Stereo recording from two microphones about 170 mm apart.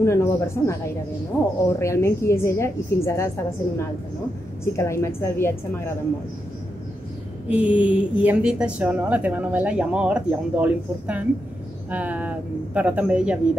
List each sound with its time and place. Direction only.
0.0 s a woman's voice: 15° left (ahead or behind)
4.7 s a woman's voice: 15° left (ahead or behind)
7.4 s a woman's voice: 10° right (ahead or behind)